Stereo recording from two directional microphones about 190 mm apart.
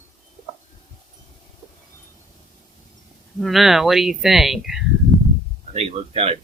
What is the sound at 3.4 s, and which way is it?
Speech, centre (ahead or behind).